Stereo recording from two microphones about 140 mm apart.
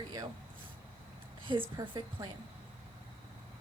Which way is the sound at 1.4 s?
35° right (ahead or behind).